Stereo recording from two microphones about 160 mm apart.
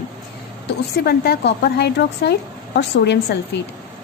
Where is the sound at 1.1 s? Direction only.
90° left.